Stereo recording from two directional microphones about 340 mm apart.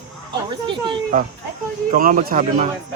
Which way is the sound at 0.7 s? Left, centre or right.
Right.